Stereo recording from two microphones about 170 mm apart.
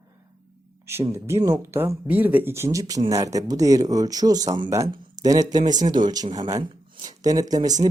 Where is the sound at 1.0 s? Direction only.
15° right (ahead or behind).